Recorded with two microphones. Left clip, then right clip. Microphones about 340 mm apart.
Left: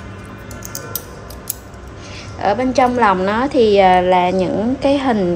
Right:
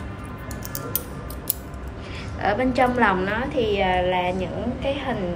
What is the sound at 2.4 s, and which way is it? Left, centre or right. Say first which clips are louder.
A woman's voice: left 6 dB; centre.